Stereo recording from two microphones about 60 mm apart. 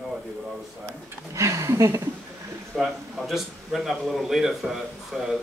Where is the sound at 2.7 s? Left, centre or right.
Centre.